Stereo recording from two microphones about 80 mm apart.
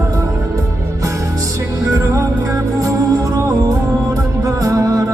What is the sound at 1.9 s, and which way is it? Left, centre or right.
Music, right.